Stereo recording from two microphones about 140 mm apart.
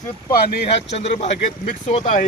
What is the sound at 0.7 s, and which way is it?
Speech, 50° left (ahead or behind).